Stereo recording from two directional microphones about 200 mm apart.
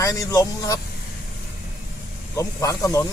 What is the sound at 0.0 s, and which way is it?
Speech, 15° left (ahead or behind).